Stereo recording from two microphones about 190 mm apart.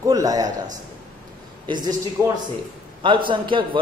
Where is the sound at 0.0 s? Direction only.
20° right (ahead or behind).